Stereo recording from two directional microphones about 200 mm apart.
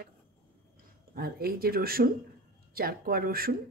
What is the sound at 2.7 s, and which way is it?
Speech, 50° right (ahead or behind).